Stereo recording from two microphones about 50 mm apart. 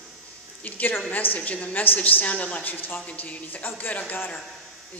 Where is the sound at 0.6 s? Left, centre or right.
Left.